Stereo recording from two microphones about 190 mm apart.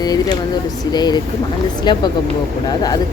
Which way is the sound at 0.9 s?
20° left (ahead or behind).